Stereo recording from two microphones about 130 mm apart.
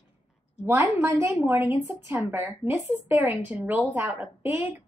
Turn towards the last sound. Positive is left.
turn(degrees=-15)  # may be behind; listen again after turning